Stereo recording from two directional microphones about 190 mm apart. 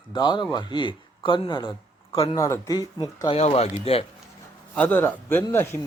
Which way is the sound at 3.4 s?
35° left (ahead or behind).